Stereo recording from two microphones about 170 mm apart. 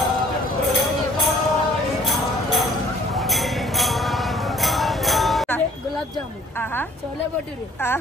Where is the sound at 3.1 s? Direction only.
Centre (ahead or behind).